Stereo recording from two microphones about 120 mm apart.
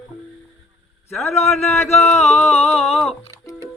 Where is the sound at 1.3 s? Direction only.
65° left (ahead or behind).